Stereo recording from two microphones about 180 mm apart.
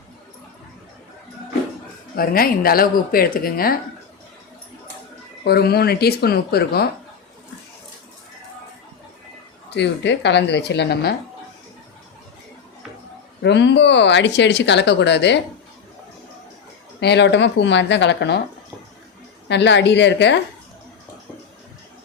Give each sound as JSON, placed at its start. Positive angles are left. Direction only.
{"t": 2.1, "sound": "speech", "side_deg": 55}
{"t": 5.5, "sound": "speech", "side_deg": 60}
{"t": 9.6, "sound": "speech", "side_deg": 75}
{"t": 13.4, "sound": "speech", "side_deg": 75}
{"t": 17.0, "sound": "speech", "side_deg": 70}
{"t": 19.5, "sound": "speech", "side_deg": 75}